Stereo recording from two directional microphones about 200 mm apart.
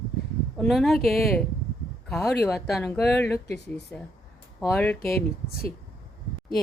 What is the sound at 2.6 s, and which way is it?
Speech, centre (ahead or behind).